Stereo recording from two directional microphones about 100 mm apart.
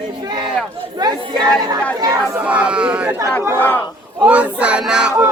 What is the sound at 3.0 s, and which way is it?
Speech, 25° right (ahead or behind).